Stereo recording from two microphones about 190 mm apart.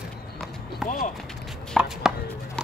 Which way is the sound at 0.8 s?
Centre (ahead or behind).